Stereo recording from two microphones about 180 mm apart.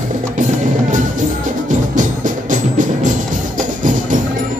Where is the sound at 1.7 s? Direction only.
45° right (ahead or behind).